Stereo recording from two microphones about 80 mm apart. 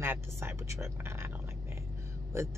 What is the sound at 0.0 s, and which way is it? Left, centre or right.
Speech, right.